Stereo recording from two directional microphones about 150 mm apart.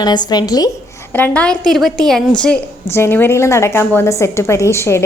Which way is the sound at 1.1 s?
10° left (ahead or behind).